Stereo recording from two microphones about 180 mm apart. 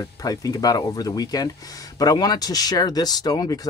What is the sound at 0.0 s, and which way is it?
Speech, 20° left (ahead or behind).